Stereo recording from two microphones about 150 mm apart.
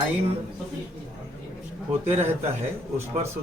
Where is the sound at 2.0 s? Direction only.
15° right (ahead or behind).